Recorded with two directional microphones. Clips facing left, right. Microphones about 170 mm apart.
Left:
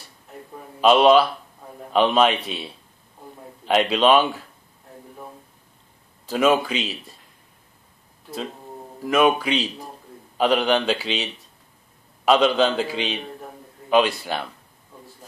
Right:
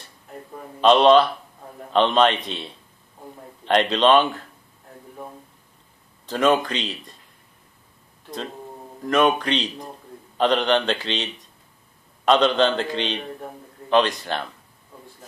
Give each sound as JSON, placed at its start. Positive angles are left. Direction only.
{"t": 0.7, "sound": "a man's voice", "side_deg": 5}
{"t": 6.2, "sound": "speech", "side_deg": 5}
{"t": 9.0, "sound": "speech", "side_deg": 5}
{"t": 12.3, "sound": "a man's voice", "side_deg": 5}